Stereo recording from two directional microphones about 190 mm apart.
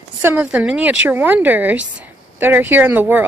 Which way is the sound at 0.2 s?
10° right (ahead or behind).